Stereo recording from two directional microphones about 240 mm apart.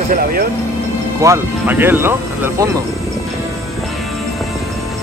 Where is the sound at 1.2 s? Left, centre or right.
Centre.